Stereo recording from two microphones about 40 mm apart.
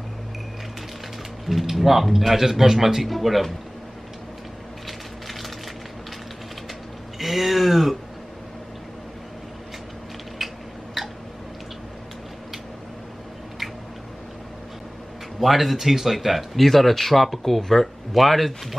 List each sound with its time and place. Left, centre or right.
1.4 s speech: centre
7.2 s speech: centre
10.4 s a sound: centre
15.4 s speech: centre